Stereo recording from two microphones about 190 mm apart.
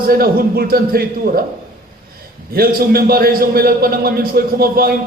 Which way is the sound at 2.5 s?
50° right (ahead or behind).